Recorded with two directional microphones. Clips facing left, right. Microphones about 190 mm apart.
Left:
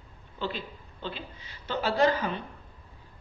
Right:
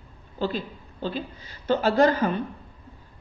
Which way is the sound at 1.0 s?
40° right (ahead or behind).